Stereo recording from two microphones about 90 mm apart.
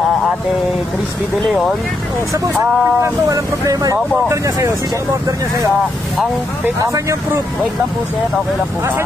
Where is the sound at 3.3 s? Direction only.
40° right (ahead or behind).